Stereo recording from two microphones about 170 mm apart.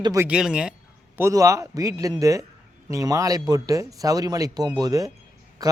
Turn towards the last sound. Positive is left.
turn(degrees=-20)  # may be behind; listen again after turning